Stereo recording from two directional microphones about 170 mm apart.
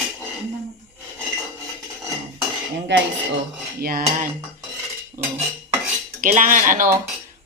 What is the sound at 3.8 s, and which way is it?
Cutlery, 60° right (ahead or behind).